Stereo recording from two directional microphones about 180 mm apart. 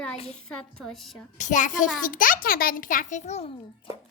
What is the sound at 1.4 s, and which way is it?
A child's voice, 45° left (ahead or behind).